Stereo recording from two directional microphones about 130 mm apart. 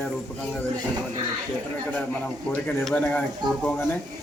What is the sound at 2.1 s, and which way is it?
A man's voice, 10° left (ahead or behind).